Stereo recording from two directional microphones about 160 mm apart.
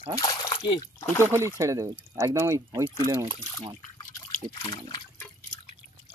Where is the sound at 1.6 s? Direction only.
20° right (ahead or behind).